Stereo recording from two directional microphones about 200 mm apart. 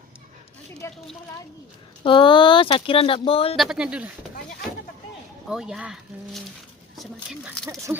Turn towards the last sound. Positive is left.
turn(degrees=-10)  # may be behind; listen again after turning